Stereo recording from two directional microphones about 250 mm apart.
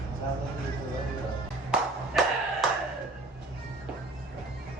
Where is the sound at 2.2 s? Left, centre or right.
Centre.